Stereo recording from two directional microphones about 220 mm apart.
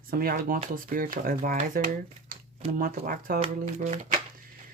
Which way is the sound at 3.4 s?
30° right (ahead or behind).